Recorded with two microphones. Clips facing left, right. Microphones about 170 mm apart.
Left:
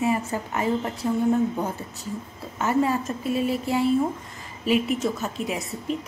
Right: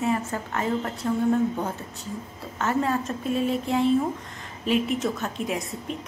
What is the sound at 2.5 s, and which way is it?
A woman's voice, 10° left (ahead or behind).